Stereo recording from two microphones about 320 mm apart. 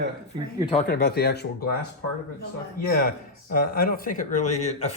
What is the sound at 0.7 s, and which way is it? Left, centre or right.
Speech, left.